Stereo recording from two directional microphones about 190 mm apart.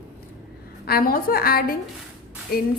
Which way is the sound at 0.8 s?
50° left (ahead or behind).